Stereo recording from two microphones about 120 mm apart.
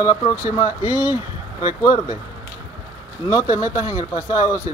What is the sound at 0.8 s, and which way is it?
Speech, 15° right (ahead or behind).